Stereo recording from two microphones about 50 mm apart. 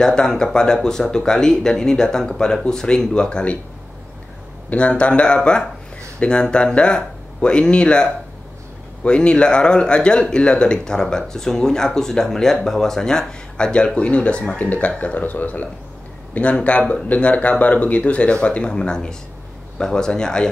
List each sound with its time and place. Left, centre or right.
0.0 s speech: centre
4.6 s speech: left